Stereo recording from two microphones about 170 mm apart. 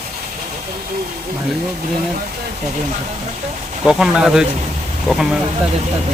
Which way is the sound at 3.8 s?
5° right (ahead or behind).